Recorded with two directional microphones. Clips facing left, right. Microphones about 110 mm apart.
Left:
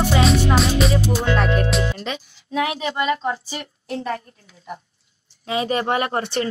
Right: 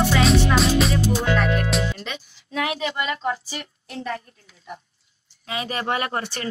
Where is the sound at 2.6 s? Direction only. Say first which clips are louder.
Left 3 dB; 25° left (ahead or behind).